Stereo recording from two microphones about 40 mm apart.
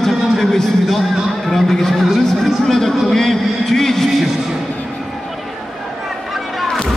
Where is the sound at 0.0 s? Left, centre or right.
Centre.